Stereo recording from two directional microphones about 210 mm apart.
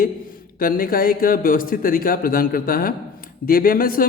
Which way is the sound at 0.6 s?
45° left (ahead or behind).